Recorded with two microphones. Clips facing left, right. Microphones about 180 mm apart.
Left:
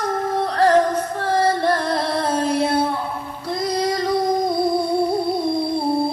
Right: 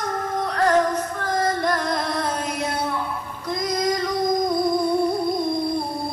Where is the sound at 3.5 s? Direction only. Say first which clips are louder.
Left 2 dB; 30° left (ahead or behind).